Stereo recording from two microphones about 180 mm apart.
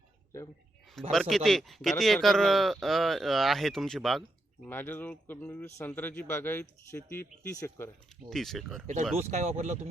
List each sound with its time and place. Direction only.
1.1 s speech: centre (ahead or behind)
4.6 s a man's voice: 10° left (ahead or behind)
8.3 s speech: centre (ahead or behind)
9.1 s speech: 40° right (ahead or behind)